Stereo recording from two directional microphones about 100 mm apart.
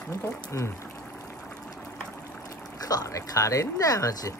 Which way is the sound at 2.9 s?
35° left (ahead or behind).